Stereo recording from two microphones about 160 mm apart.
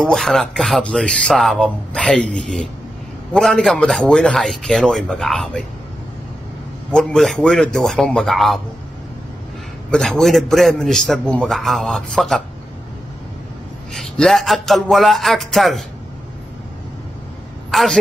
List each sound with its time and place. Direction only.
0.0 s speech: 5° left (ahead or behind)
6.9 s speech: 5° left (ahead or behind)
9.8 s speech: 5° left (ahead or behind)
13.9 s speech: 5° left (ahead or behind)
17.6 s a sound: centre (ahead or behind)